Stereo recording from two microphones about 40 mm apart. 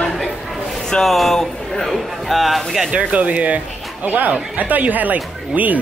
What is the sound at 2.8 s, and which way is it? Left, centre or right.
Speech, right.